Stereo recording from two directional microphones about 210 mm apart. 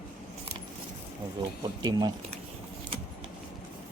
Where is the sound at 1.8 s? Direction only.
20° right (ahead or behind).